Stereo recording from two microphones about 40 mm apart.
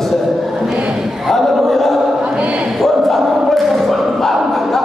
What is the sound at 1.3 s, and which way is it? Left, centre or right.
Chant, centre.